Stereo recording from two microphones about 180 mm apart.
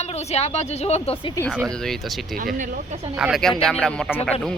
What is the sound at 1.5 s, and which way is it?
A man's voice, centre (ahead or behind).